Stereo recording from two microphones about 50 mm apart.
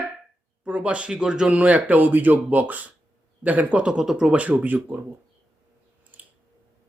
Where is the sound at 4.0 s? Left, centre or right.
Centre.